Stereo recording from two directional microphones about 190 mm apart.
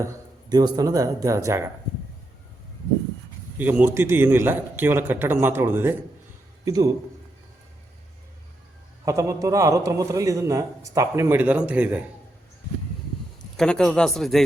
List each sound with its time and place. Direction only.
0.0 s a man's voice: 20° right (ahead or behind)
3.6 s a man's voice: 10° right (ahead or behind)
9.0 s a man's voice: 15° right (ahead or behind)
13.6 s speech: 5° left (ahead or behind)